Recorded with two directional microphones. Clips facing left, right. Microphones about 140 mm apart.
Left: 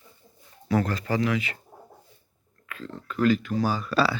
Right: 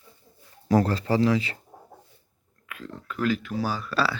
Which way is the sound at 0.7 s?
35° right (ahead or behind).